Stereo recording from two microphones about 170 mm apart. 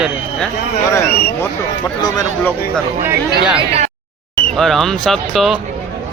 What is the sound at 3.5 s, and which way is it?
Speech, 35° right (ahead or behind).